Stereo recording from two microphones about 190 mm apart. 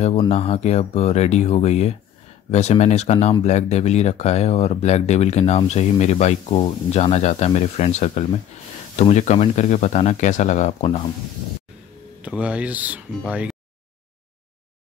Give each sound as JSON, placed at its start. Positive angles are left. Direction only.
{"t": 0.3, "sound": "speech", "side_deg": 35}
{"t": 12.2, "sound": "speech", "side_deg": -5}